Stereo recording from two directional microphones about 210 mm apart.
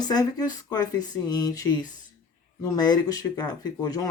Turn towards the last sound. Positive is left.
turn(degrees=15)  # may be behind; listen again after turning